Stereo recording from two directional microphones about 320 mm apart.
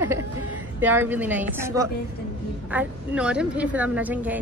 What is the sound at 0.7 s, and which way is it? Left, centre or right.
A woman's voice, centre.